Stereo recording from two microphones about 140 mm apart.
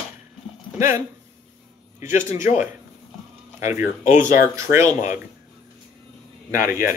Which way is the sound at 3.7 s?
20° right (ahead or behind).